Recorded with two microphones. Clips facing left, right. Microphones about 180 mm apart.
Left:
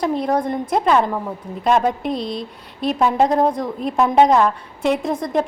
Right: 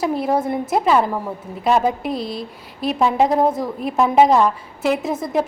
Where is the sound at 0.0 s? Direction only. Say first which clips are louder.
Even; 5° right (ahead or behind).